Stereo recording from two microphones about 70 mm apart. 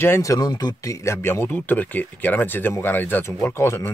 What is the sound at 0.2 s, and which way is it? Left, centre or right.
Speech, left.